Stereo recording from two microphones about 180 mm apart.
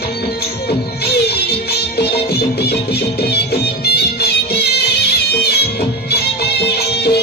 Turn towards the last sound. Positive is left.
turn(degrees=65)  # may be behind; listen again after turning